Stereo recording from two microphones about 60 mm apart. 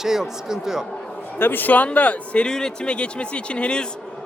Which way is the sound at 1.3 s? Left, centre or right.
Left.